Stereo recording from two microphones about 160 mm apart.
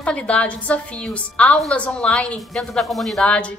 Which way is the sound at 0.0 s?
5° left (ahead or behind).